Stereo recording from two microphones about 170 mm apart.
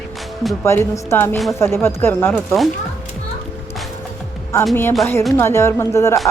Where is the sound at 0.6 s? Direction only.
15° left (ahead or behind).